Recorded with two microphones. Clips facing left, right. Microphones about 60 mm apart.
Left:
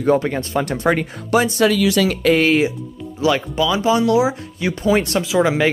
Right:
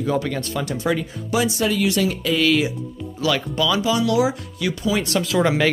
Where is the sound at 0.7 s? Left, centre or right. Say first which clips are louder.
Left 3 dB; left.